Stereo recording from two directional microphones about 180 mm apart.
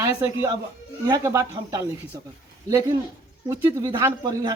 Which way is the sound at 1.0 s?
20° right (ahead or behind).